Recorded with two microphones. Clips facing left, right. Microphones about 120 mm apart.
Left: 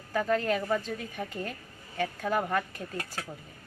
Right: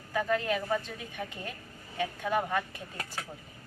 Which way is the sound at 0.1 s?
40° left (ahead or behind).